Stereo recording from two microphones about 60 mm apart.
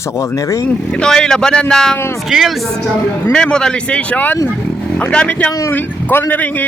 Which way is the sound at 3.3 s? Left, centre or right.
Centre.